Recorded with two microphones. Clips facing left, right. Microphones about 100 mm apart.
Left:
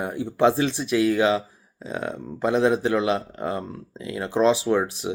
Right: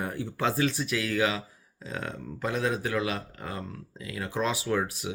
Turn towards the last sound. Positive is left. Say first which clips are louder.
# left 6 dB
turn(degrees=25)  # may be behind; listen again after turning